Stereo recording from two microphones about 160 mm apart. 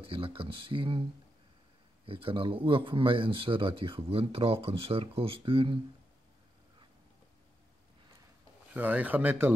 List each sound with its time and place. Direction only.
0.0 s speech: 35° right (ahead or behind)
2.0 s speech: 35° right (ahead or behind)
8.7 s speech: 10° right (ahead or behind)